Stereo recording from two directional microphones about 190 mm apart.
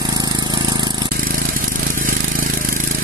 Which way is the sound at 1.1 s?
50° right (ahead or behind).